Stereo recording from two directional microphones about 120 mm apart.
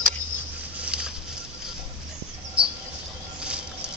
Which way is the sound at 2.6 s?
10° right (ahead or behind).